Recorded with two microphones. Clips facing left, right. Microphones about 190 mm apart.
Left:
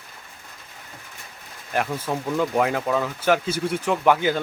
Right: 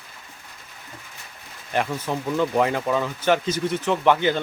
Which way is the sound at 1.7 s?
5° left (ahead or behind).